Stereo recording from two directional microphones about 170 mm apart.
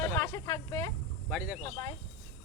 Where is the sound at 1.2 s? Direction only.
5° right (ahead or behind).